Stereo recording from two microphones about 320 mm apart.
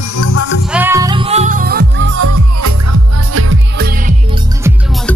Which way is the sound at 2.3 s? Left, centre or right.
Right.